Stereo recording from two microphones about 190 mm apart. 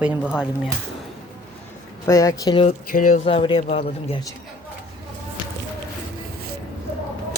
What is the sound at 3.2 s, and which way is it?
Speech, 30° left (ahead or behind).